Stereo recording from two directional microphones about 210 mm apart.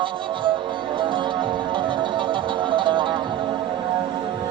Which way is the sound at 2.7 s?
25° right (ahead or behind).